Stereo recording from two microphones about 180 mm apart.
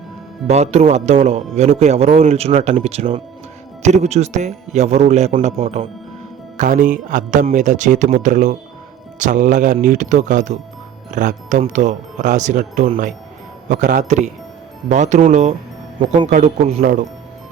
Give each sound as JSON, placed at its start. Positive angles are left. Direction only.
{"t": 0.4, "sound": "a man's voice", "side_deg": -35}
{"t": 6.6, "sound": "a man's voice", "side_deg": -45}
{"t": 16.0, "sound": "a man's voice", "side_deg": -30}